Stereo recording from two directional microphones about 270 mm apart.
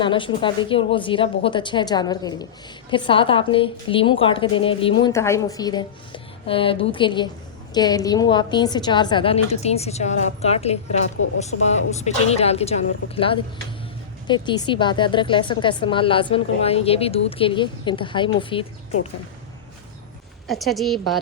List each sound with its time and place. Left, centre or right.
0.0 s a woman's voice: centre
20.5 s a woman's voice: centre